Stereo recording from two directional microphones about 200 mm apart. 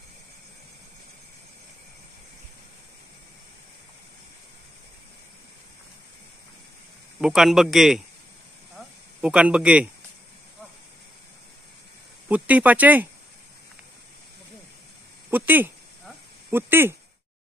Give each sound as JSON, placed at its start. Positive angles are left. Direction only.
{"t": 7.2, "sound": "a man's voice", "side_deg": 0}
{"t": 8.7, "sound": "a sound", "side_deg": -5}
{"t": 12.3, "sound": "speech", "side_deg": -5}
{"t": 15.3, "sound": "speech", "side_deg": -10}